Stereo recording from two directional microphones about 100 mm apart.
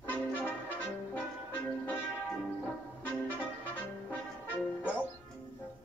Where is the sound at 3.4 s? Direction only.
15° left (ahead or behind).